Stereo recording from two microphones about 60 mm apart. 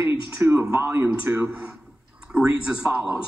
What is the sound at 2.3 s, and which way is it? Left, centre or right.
Speech, right.